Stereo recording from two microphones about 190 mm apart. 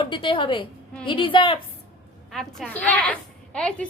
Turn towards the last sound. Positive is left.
turn(degrees=5)  # may be behind; listen again after turning